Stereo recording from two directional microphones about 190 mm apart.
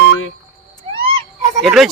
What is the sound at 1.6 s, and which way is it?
Speech, centre (ahead or behind).